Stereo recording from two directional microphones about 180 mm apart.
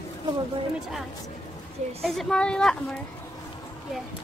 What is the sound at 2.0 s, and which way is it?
Speech, centre (ahead or behind).